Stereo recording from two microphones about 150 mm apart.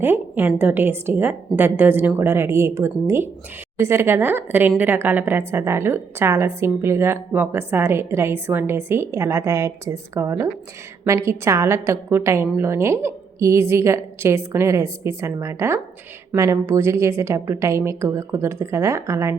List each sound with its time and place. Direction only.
0.0 s a woman's voice: 15° right (ahead or behind)